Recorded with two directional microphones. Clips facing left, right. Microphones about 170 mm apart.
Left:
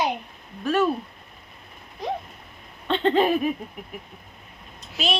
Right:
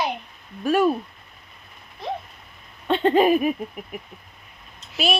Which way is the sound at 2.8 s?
10° right (ahead or behind).